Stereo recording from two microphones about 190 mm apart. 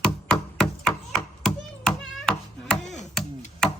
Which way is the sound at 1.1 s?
5° left (ahead or behind).